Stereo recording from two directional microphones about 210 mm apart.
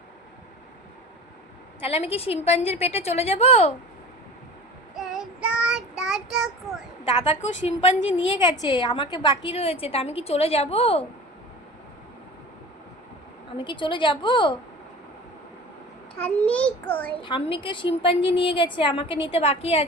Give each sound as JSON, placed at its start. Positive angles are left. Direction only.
{"t": 1.8, "sound": "a woman's voice", "side_deg": 30}
{"t": 4.9, "sound": "child singing", "side_deg": 0}
{"t": 7.4, "sound": "a woman's voice", "side_deg": 30}
{"t": 8.5, "sound": "a woman's voice", "side_deg": 20}
{"t": 13.6, "sound": "a woman's voice", "side_deg": 20}
{"t": 16.3, "sound": "a child's voice", "side_deg": 5}
{"t": 17.2, "sound": "a woman's voice", "side_deg": 25}